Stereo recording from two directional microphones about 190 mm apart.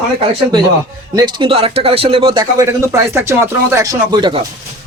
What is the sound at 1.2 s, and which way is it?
Speech, 25° right (ahead or behind).